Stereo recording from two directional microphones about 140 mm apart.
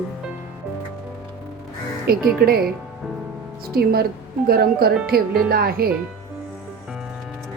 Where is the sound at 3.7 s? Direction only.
90° right.